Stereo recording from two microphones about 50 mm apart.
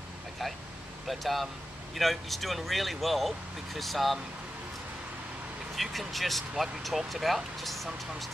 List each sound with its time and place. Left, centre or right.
1.0 s speech: centre
5.8 s speech: centre